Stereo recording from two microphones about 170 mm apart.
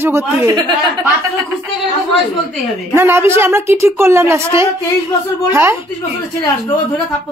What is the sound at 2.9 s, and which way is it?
A woman's voice, 15° right (ahead or behind).